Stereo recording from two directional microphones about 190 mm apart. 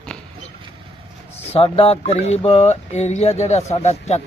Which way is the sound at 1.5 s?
30° left (ahead or behind).